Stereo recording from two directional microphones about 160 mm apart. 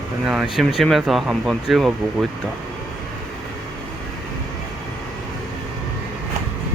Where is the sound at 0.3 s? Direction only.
Centre (ahead or behind).